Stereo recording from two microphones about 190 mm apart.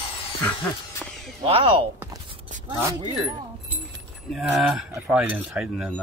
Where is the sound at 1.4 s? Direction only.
25° right (ahead or behind).